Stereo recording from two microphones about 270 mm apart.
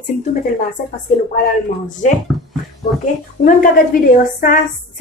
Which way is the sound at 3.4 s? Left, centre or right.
Left.